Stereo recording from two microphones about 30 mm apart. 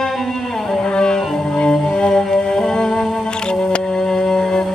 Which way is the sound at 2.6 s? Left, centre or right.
Centre.